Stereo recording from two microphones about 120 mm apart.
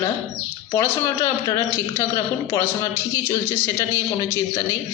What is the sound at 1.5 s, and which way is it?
A woman's voice, 25° left (ahead or behind).